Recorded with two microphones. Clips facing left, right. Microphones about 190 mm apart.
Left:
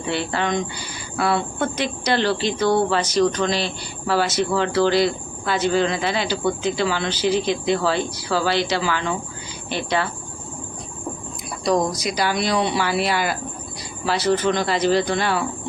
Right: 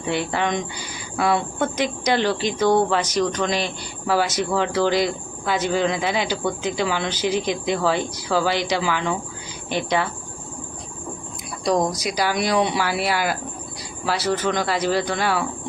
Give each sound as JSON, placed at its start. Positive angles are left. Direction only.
{"t": 0.1, "sound": "speech", "side_deg": -15}
{"t": 11.6, "sound": "speech", "side_deg": -10}